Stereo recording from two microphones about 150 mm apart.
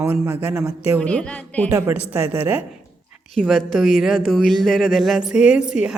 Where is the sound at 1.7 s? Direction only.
20° right (ahead or behind).